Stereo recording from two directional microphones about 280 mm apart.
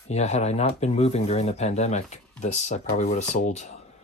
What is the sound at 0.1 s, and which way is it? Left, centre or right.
Speech, left.